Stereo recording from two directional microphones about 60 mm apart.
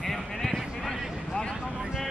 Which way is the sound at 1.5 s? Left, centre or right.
Centre.